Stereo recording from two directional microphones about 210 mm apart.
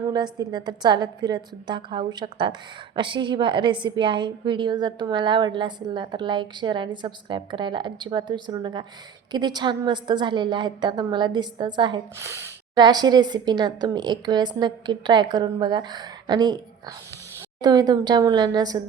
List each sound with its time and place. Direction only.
0.1 s a woman's voice: 20° right (ahead or behind)
17.6 s a woman's voice: 20° right (ahead or behind)